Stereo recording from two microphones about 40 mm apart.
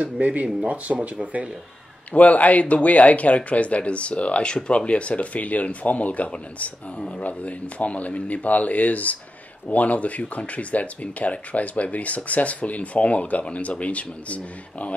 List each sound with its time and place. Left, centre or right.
0.0 s speech: right
2.1 s speech: left